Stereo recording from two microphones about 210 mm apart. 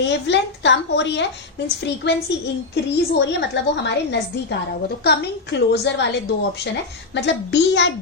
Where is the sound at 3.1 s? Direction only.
55° left (ahead or behind).